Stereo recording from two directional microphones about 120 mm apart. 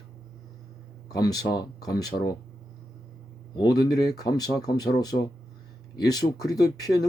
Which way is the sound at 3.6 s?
35° left (ahead or behind).